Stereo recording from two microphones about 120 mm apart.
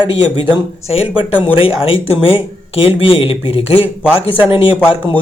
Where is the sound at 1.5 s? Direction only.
50° left (ahead or behind).